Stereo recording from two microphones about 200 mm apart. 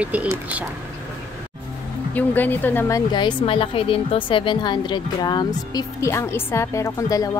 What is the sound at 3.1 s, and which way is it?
A woman's voice, 25° left (ahead or behind).